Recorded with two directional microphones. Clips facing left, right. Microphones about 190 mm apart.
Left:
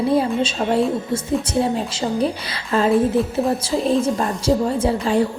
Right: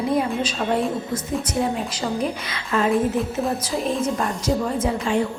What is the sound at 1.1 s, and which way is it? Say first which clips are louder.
A woman's voice: left 4 dB; 30° left (ahead or behind).